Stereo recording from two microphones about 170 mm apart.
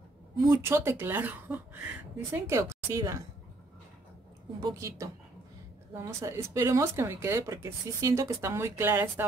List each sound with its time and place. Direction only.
0.5 s speech: 15° right (ahead or behind)
4.6 s a woman's voice: 20° right (ahead or behind)